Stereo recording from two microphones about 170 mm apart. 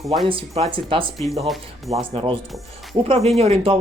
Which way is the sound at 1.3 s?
Centre (ahead or behind).